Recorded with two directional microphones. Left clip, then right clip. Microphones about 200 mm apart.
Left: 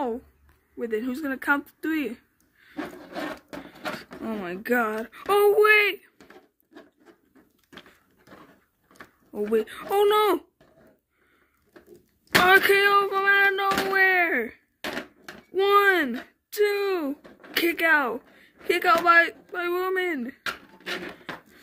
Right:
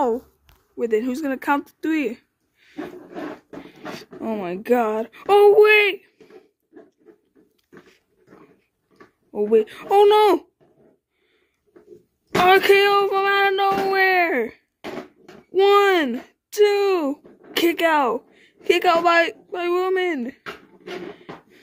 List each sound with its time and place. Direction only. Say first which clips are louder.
0.7 s speech: right 7 dB; 5° left (ahead or behind)
2.8 s rub: right 1 dB; 25° left (ahead or behind)
3.9 s speech: right 5 dB; 10° left (ahead or behind)
9.3 s speech: right 7 dB; 10° left (ahead or behind)
12.4 s speech: right 3 dB; 10° left (ahead or behind)
14.8 s a sound: left 1 dB; 20° left (ahead or behind)
15.5 s speech: right 4 dB; 5° left (ahead or behind)
20.4 s a sound: left 3 dB; 20° left (ahead or behind)